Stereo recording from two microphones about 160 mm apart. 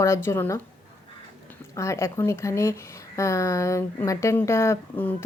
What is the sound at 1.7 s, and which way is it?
Speech, 20° left (ahead or behind).